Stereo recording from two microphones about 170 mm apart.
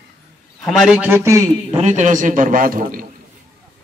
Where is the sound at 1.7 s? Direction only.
45° right (ahead or behind).